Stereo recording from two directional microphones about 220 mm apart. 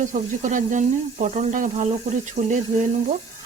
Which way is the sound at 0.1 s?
35° right (ahead or behind).